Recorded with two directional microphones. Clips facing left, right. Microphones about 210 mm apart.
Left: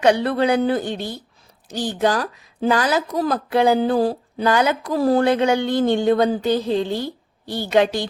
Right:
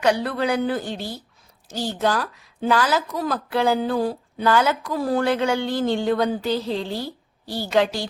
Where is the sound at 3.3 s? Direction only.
20° left (ahead or behind).